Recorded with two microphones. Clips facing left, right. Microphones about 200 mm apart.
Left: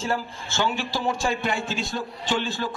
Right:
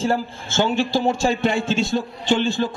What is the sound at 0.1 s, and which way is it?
A man's voice, 30° right (ahead or behind).